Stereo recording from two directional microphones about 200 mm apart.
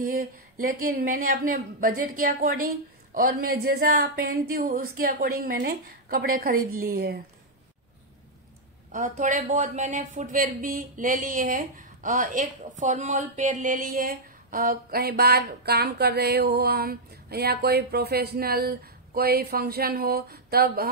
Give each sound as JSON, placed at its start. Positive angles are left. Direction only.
{"t": 0.0, "sound": "speech", "side_deg": -45}
{"t": 8.9, "sound": "speech", "side_deg": -40}